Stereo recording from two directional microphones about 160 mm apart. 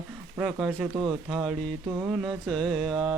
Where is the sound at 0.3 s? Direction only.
5° right (ahead or behind).